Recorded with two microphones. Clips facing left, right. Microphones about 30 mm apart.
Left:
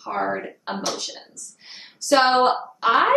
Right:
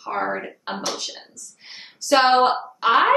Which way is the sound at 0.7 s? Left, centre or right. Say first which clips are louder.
Left 1 dB; centre.